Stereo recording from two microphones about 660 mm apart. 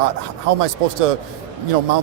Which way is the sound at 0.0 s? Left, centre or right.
Right.